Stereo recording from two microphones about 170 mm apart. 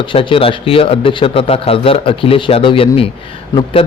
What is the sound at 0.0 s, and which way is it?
Speech, 30° left (ahead or behind).